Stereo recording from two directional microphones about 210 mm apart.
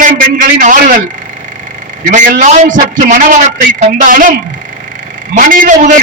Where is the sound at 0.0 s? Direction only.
40° right (ahead or behind).